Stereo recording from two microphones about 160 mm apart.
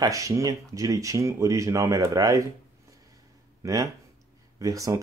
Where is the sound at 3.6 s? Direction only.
20° right (ahead or behind).